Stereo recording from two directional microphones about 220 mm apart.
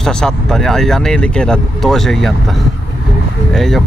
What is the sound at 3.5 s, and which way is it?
Speech, centre (ahead or behind).